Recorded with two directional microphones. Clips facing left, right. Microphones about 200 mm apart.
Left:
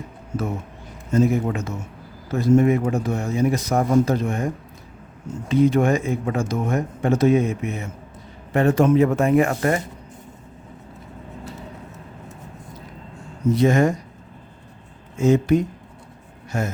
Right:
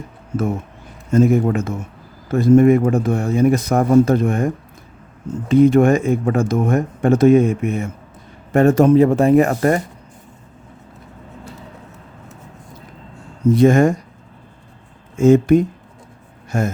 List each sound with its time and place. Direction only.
1.1 s speech: 50° right (ahead or behind)
5.5 s speech: 50° right (ahead or behind)
13.5 s speech: 50° right (ahead or behind)
15.1 s speech: 50° right (ahead or behind)